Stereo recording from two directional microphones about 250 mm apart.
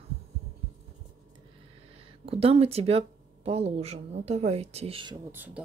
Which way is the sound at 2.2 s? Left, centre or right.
Right.